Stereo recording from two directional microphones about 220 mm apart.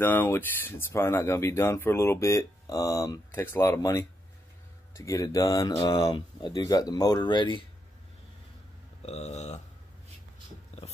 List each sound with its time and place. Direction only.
0.0 s speech: 10° left (ahead or behind)
9.0 s speech: 30° left (ahead or behind)
10.7 s dog: 30° left (ahead or behind)